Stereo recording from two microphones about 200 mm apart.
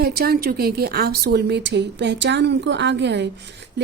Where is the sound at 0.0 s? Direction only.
50° right (ahead or behind).